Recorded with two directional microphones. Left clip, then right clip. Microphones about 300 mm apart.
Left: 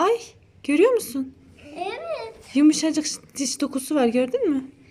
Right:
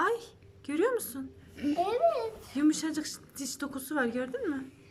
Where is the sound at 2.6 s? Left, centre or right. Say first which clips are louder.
Left 10 dB; centre.